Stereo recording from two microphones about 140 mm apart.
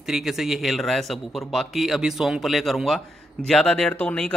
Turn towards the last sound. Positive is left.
turn(degrees=10)  # may be behind; listen again after turning